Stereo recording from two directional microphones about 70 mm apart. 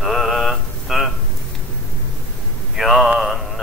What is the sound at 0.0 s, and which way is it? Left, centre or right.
Mantra, centre.